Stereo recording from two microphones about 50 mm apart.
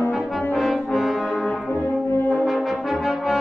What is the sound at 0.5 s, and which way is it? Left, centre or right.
Brass instrument, centre.